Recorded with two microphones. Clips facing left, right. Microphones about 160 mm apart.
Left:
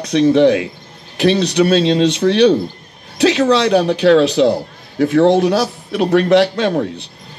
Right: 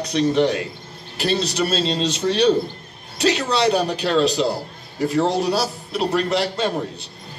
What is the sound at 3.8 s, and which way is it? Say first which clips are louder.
Speech: left 8 dB; 70° left (ahead or behind).